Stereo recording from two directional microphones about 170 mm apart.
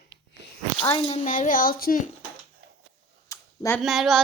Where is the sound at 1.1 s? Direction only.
50° left (ahead or behind).